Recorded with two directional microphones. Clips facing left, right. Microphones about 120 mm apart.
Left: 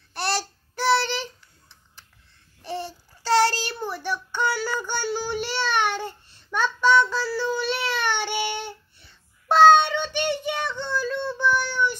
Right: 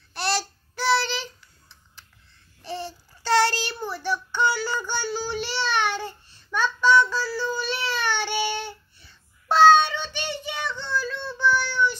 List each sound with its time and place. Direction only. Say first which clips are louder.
0.1 s child singing: even; 50° left (ahead or behind)
2.6 s babbling: left 1 dB; 50° left (ahead or behind)
3.3 s child singing: left 1 dB; 35° left (ahead or behind)
3.9 s child singing: right 1 dB; 50° left (ahead or behind)
10.7 s child singing: left 2 dB; 15° left (ahead or behind)
11.0 s child singing: left 3 dB; 55° left (ahead or behind)
11.2 s child singing: right 2 dB; 15° left (ahead or behind)